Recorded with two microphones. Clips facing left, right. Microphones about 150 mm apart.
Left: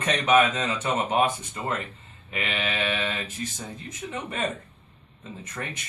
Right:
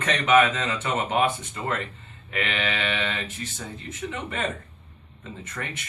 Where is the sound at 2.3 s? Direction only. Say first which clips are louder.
Right 2 dB; 10° left (ahead or behind).